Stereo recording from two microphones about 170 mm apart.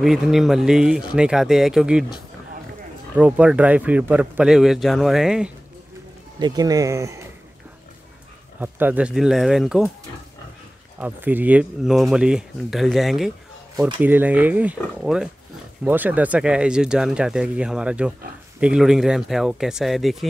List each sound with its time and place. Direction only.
0.0 s speech: centre (ahead or behind)
3.2 s speech: 5° right (ahead or behind)
6.4 s speech: 25° right (ahead or behind)
8.5 s speech: 10° right (ahead or behind)
11.0 s speech: 10° right (ahead or behind)